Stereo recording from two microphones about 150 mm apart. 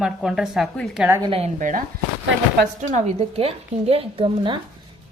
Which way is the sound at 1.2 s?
40° right (ahead or behind).